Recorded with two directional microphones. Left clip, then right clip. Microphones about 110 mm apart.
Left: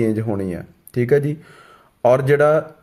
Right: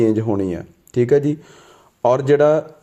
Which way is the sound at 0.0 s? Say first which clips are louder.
Right 4 dB; 15° right (ahead or behind).